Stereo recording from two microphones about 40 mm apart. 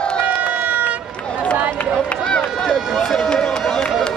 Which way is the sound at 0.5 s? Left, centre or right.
Right.